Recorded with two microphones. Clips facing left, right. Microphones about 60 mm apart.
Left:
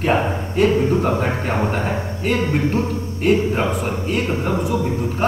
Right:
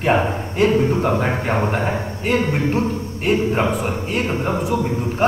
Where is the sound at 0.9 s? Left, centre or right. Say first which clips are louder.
Even; right.